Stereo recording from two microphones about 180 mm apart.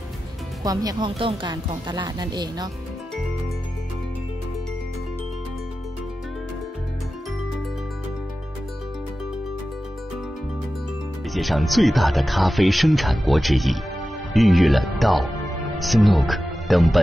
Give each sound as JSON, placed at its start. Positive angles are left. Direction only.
{"t": 0.7, "sound": "speech", "side_deg": -20}
{"t": 11.3, "sound": "speech", "side_deg": 0}